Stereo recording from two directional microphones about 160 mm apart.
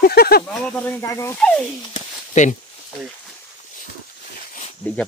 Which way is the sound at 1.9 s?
50° left (ahead or behind).